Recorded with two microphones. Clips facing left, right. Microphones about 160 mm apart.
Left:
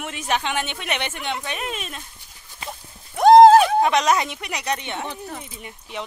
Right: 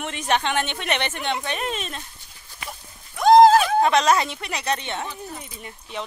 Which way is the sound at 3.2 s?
60° left (ahead or behind).